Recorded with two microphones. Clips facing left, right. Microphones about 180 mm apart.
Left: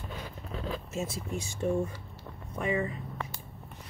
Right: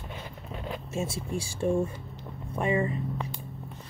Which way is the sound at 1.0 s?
80° right.